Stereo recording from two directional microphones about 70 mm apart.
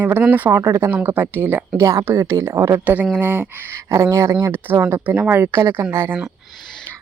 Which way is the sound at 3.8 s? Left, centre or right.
Right.